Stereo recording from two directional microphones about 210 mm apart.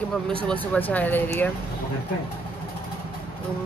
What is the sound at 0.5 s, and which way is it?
Speech, 10° left (ahead or behind).